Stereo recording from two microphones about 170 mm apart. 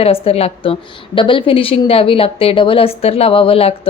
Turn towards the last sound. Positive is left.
turn(degrees=35)  # may be behind; listen again after turning